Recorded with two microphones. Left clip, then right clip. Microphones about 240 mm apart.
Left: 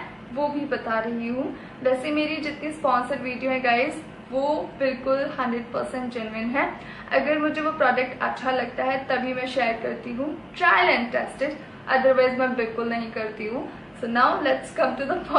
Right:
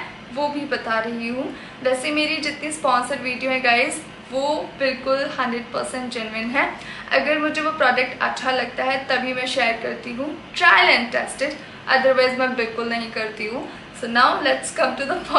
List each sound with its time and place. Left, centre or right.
0.4 s a woman's voice: centre
5.7 s a woman's voice: left
5.9 s a woman's voice: centre